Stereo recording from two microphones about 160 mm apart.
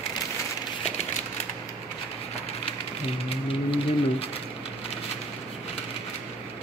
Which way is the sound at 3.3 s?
35° left (ahead or behind).